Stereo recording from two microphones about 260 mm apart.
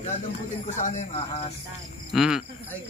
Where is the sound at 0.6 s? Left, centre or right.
Left.